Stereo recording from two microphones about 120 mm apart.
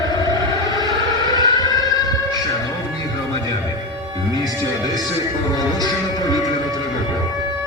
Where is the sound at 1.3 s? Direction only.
30° left (ahead or behind).